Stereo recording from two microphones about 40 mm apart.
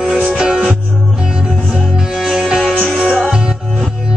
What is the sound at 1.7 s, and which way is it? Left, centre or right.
Music, centre.